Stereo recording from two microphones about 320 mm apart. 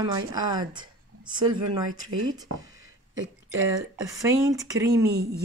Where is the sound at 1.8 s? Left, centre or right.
Right.